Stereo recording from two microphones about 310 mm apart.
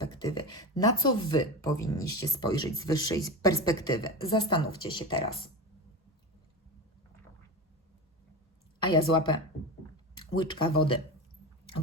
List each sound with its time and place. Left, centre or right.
0.1 s speech: centre
8.8 s speech: centre